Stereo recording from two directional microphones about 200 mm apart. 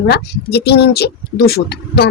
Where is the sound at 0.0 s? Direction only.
55° left (ahead or behind).